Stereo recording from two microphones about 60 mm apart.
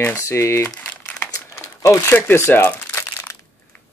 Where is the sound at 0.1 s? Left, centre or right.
Left.